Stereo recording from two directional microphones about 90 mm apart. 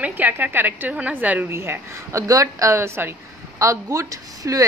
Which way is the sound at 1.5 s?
30° right (ahead or behind).